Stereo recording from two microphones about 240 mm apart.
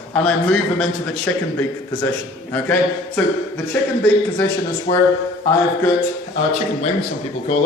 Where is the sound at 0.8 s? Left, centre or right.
Centre.